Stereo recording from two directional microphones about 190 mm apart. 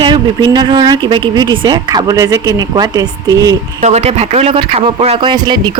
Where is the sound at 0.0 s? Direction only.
25° right (ahead or behind).